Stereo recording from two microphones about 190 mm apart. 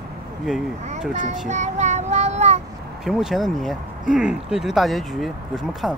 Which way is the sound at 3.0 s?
Centre (ahead or behind).